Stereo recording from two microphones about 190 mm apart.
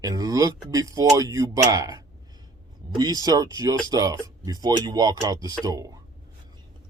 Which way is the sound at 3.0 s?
20° right (ahead or behind).